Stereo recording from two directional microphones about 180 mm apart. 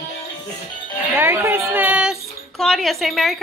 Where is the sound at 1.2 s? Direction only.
10° right (ahead or behind).